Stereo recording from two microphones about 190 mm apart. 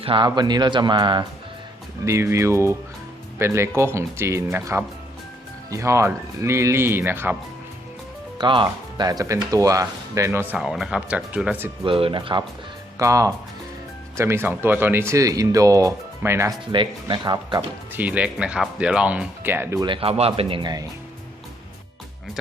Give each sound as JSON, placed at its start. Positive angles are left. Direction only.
{"t": 0.0, "sound": "speech", "side_deg": -25}
{"t": 8.4, "sound": "speech", "side_deg": -25}
{"t": 10.6, "sound": "speech", "side_deg": 0}
{"t": 11.9, "sound": "speech", "side_deg": -30}
{"t": 16.7, "sound": "speech", "side_deg": -25}
{"t": 17.9, "sound": "speech", "side_deg": -5}
{"t": 19.8, "sound": "speech", "side_deg": -25}